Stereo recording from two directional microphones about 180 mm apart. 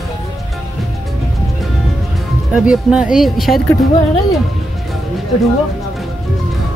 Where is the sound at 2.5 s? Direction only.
5° right (ahead or behind).